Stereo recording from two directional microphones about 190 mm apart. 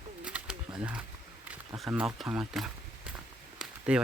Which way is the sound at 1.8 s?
5° right (ahead or behind).